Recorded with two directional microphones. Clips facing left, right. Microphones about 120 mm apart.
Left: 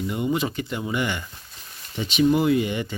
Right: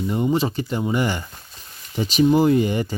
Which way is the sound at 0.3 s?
30° right (ahead or behind).